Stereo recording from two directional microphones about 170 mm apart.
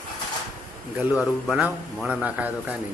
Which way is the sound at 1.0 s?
10° right (ahead or behind).